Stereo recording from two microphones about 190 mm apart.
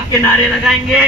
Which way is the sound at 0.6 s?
5° right (ahead or behind).